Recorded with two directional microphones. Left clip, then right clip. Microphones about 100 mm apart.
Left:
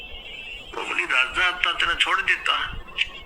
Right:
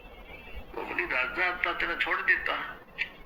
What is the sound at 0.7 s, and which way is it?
A man's voice, 25° left (ahead or behind).